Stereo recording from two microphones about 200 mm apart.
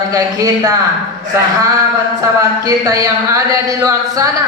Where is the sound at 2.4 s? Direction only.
15° right (ahead or behind).